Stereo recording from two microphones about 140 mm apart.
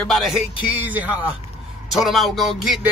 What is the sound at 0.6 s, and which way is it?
Speech, 10° right (ahead or behind).